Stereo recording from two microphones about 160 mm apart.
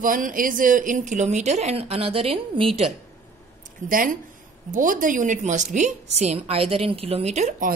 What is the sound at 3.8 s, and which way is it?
A woman's voice, 60° right (ahead or behind).